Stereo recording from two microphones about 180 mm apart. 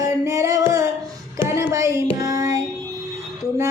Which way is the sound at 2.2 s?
15° right (ahead or behind).